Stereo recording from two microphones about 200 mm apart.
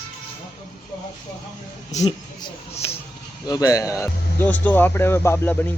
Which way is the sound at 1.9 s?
35° left (ahead or behind).